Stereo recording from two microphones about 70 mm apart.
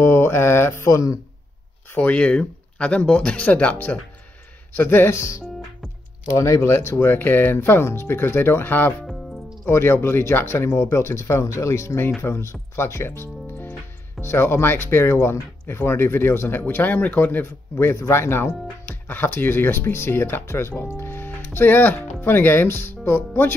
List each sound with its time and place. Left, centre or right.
0.0 s speech: left
0.8 s speech: left
2.0 s speech: centre
6.3 s speech: left